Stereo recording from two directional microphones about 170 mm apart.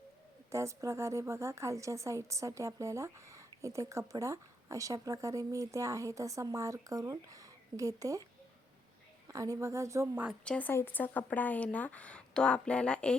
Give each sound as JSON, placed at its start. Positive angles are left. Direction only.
{"t": 0.5, "sound": "a woman's voice", "side_deg": -15}
{"t": 9.3, "sound": "a woman's voice", "side_deg": -20}
{"t": 10.4, "sound": "speech", "side_deg": 10}